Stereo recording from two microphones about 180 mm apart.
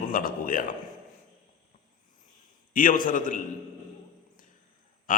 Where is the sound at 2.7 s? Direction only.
50° left (ahead or behind).